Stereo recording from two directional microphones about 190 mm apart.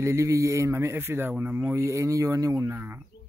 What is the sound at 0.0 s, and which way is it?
Speech, 15° right (ahead or behind).